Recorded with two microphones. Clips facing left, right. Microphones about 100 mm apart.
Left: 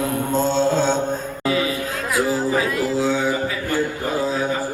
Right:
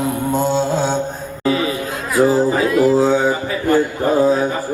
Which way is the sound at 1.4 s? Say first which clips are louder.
Right 4 dB; 30° right (ahead or behind).